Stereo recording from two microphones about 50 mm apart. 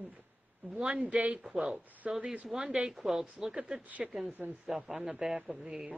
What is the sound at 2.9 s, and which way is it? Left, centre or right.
Speech, centre.